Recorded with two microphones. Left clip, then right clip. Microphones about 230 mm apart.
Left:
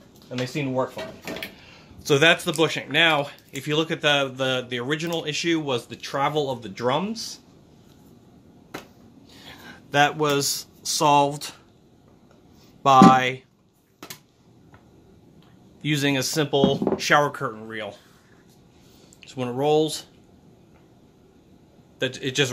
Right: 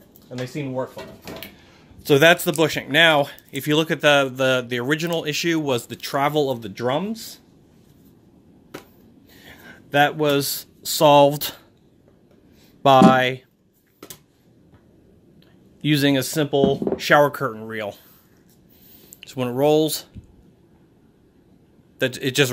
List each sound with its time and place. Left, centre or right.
0.3 s speech: centre
2.0 s speech: right
9.3 s speech: right
12.8 s speech: right
15.8 s speech: right
19.1 s speech: right
21.9 s a man's voice: right